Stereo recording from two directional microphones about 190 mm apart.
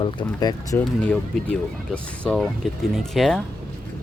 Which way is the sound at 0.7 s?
5° left (ahead or behind).